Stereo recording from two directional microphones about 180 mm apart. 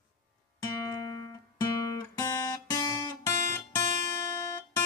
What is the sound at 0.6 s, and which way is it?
Music, 20° left (ahead or behind).